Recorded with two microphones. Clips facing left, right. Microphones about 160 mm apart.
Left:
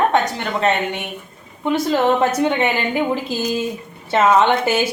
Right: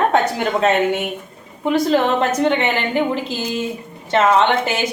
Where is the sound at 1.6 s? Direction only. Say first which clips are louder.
Right 1 dB; 5° left (ahead or behind).